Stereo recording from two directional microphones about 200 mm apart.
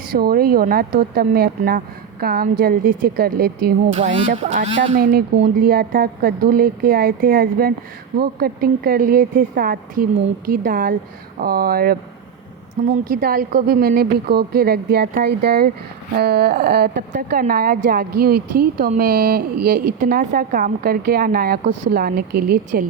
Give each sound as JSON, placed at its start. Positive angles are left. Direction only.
{"t": 0.1, "sound": "speech", "side_deg": -50}
{"t": 3.9, "sound": "speech", "side_deg": -35}
{"t": 5.1, "sound": "speech", "side_deg": -50}